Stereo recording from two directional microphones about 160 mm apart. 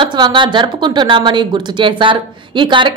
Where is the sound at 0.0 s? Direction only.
30° right (ahead or behind).